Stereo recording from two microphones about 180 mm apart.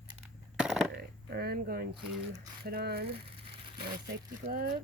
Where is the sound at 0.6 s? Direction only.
5° right (ahead or behind).